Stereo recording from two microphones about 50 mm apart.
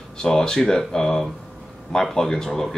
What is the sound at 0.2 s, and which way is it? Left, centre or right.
Speech, centre.